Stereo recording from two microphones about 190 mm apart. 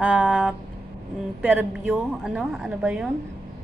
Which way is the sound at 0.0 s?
5° right (ahead or behind).